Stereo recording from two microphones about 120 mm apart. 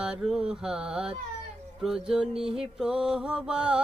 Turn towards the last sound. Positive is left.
turn(degrees=-5)  # may be behind; listen again after turning